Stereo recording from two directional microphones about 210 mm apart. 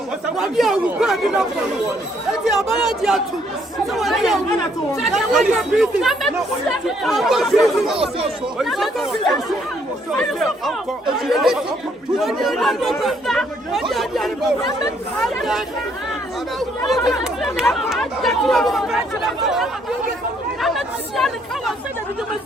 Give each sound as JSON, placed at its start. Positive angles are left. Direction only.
{"t": 0.3, "sound": "speech", "side_deg": 0}
{"t": 3.0, "sound": "speech", "side_deg": 0}
{"t": 7.9, "sound": "speech", "side_deg": -25}
{"t": 8.5, "sound": "speech", "side_deg": 0}
{"t": 17.1, "sound": "speech", "side_deg": 0}